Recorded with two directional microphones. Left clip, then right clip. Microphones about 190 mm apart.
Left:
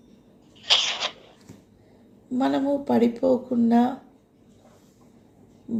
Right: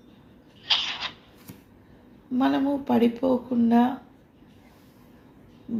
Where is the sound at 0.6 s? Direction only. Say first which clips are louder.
Left 4 dB; 65° left (ahead or behind).